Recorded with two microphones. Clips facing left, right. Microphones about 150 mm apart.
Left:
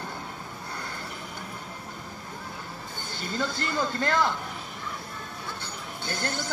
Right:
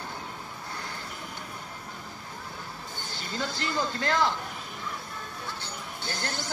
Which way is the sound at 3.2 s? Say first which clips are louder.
Left 3 dB; 55° left (ahead or behind).